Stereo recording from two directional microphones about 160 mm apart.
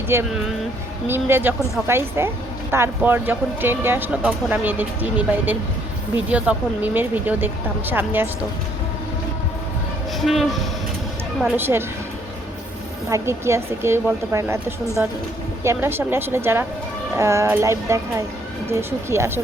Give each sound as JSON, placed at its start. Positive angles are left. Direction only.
{"t": 0.1, "sound": "speech", "side_deg": -15}
{"t": 10.2, "sound": "speech", "side_deg": 0}
{"t": 11.5, "sound": "speech", "side_deg": -15}
{"t": 13.1, "sound": "speech", "side_deg": -20}